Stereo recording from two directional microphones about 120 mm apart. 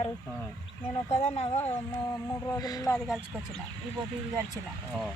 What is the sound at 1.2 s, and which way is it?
Speech, 65° left (ahead or behind).